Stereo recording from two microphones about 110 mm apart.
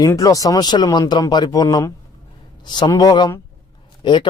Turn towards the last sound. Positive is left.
turn(degrees=45)  # may be behind; listen again after turning